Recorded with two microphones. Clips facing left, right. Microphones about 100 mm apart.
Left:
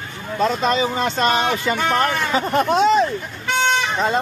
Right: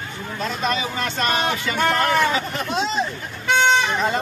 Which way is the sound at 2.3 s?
45° left (ahead or behind).